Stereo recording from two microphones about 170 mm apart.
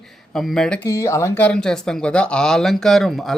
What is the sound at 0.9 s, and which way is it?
Speech, 15° left (ahead or behind).